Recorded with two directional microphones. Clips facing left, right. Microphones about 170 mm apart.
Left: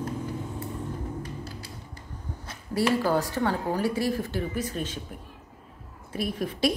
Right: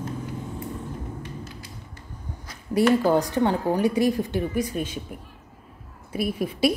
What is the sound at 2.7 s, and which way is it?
Speech, 20° right (ahead or behind).